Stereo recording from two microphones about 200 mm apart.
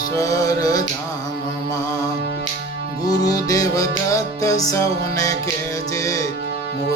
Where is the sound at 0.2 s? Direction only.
15° left (ahead or behind).